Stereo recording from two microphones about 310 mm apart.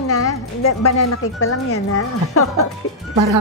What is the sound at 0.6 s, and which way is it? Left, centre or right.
Speech, left.